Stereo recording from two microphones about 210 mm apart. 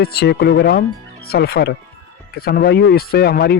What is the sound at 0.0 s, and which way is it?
Speech, 50° left (ahead or behind).